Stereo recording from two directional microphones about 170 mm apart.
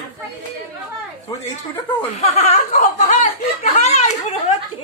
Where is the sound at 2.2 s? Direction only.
40° left (ahead or behind).